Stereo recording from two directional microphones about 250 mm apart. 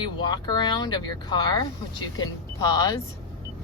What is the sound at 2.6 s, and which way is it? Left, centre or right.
Speech, centre.